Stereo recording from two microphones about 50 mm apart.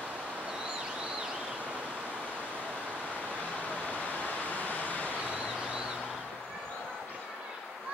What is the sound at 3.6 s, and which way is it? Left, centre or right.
Vehicle, left.